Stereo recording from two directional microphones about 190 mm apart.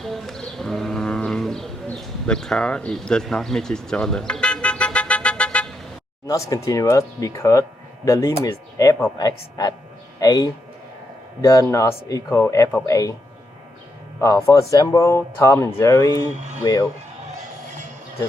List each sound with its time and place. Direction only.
0.0 s livestock: centre (ahead or behind)
6.2 s speech: 20° left (ahead or behind)
14.2 s speech: 15° left (ahead or behind)
16.3 s speech: 35° right (ahead or behind)